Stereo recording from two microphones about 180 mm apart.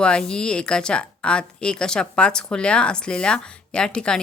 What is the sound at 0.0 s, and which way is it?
A woman's voice, 5° left (ahead or behind).